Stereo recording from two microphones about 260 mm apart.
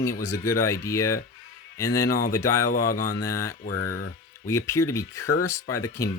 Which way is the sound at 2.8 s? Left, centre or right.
Left.